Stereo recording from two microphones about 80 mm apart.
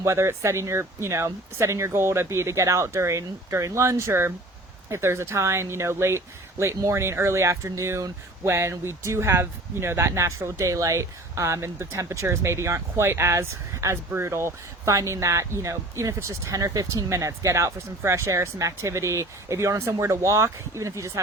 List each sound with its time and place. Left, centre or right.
0.0 s speech: right